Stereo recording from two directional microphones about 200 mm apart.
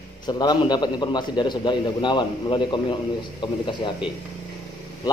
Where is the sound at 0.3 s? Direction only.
20° left (ahead or behind).